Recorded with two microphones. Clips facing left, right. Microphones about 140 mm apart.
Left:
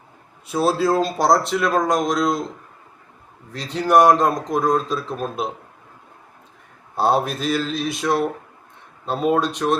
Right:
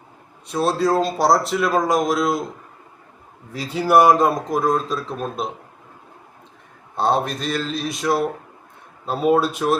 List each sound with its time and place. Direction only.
0.4 s a man's voice: 5° left (ahead or behind)
3.5 s a man's voice: 5° right (ahead or behind)
6.9 s a man's voice: 5° left (ahead or behind)